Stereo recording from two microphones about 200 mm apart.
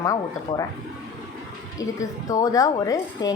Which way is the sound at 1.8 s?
15° left (ahead or behind).